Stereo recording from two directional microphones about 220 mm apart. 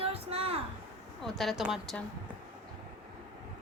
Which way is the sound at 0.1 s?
25° right (ahead or behind).